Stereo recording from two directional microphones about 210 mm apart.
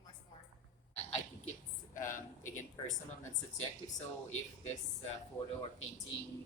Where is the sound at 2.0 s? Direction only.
35° left (ahead or behind).